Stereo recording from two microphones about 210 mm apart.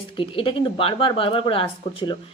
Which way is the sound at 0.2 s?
25° left (ahead or behind).